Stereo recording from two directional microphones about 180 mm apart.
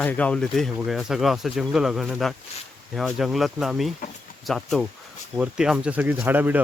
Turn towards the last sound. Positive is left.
turn(degrees=-10)  # may be behind; listen again after turning